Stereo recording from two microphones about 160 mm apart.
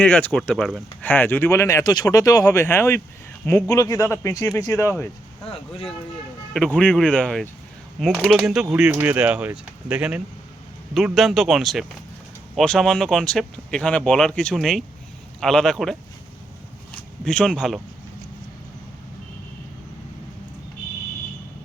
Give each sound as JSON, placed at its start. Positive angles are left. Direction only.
{"t": 0.0, "sound": "speech", "side_deg": 10}
{"t": 6.5, "sound": "speech", "side_deg": 5}
{"t": 16.9, "sound": "a sound", "side_deg": 5}